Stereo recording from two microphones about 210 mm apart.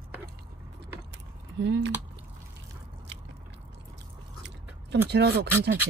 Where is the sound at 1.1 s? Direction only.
55° right (ahead or behind).